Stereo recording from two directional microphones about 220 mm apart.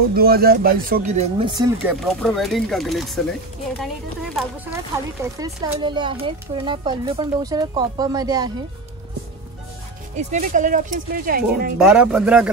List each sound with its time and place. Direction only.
0.1 s speech: 45° right (ahead or behind); by 1.7 s 20° right (ahead or behind)
2.2 s speech: centre (ahead or behind)
4.9 s speech: 15° right (ahead or behind)
10.1 s speech: 35° right (ahead or behind)
11.8 s speech: 5° right (ahead or behind)